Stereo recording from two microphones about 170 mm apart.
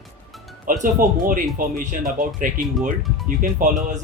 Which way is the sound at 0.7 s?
50° right (ahead or behind).